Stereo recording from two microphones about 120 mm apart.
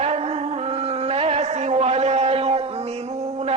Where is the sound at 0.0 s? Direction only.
60° right (ahead or behind).